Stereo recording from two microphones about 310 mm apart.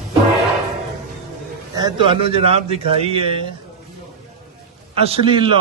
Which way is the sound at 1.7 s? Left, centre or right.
Centre.